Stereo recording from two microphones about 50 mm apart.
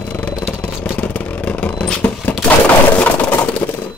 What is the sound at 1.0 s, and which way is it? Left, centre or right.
Vehicle, left.